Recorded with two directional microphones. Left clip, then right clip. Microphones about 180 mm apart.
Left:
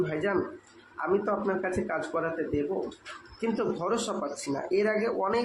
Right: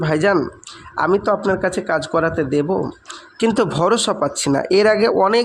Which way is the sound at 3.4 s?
60° right (ahead or behind).